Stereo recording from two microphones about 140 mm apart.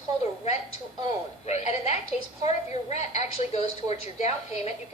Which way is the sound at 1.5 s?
55° left (ahead or behind).